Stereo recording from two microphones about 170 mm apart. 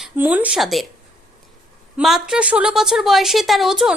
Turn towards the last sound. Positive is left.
turn(degrees=0)  # may be behind; listen again after turning